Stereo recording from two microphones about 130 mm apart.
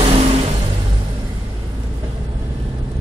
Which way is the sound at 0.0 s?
50° right (ahead or behind).